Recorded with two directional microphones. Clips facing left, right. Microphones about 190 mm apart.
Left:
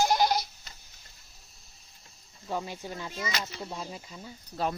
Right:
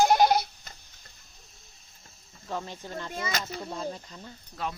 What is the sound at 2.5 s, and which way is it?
Speech, 10° left (ahead or behind).